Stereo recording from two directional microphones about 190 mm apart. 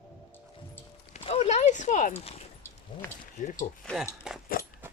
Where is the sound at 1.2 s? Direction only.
30° left (ahead or behind).